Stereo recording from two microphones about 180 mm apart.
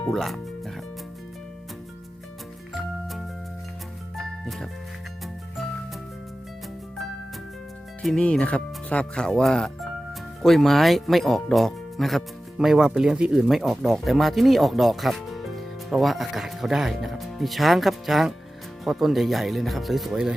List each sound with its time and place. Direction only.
0.0 s music: centre (ahead or behind)
4.3 s music: centre (ahead or behind)
8.0 s speech: 5° left (ahead or behind)